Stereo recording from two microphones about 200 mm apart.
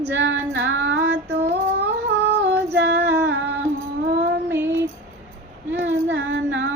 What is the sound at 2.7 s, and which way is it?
Female singing, 55° right (ahead or behind).